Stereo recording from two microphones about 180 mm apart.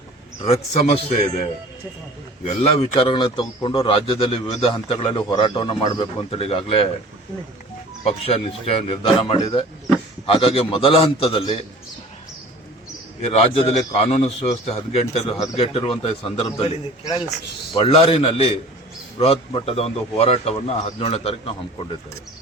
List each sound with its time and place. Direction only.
0.4 s a man's voice: 35° left (ahead or behind)
8.0 s a man's voice: 35° left (ahead or behind)
13.2 s a man's voice: 35° left (ahead or behind)
17.1 s a man's voice: 20° left (ahead or behind)
17.7 s a man's voice: 30° left (ahead or behind)